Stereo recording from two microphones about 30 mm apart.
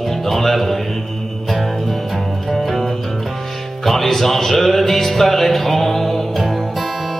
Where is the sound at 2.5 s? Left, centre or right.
Centre.